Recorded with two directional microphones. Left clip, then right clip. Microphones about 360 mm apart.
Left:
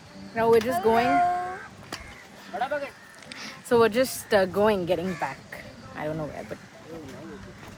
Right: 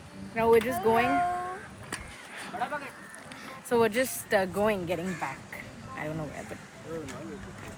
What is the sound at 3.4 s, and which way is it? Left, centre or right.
Speech, centre.